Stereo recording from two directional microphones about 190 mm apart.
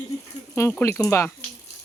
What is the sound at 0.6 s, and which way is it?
Speech, 15° left (ahead or behind).